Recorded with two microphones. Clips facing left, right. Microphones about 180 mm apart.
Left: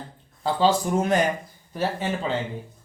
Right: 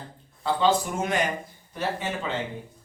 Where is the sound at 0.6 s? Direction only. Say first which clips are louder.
Left 3 dB; 35° left (ahead or behind).